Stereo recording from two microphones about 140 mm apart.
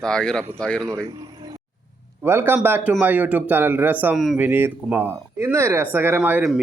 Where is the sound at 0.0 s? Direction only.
5° left (ahead or behind).